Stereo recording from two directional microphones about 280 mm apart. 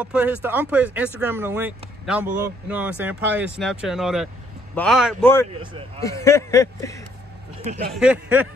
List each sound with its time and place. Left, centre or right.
0.0 s speech: centre
7.6 s speech: right
7.9 s speech: centre